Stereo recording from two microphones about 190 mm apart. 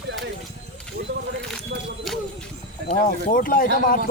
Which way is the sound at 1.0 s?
55° right (ahead or behind).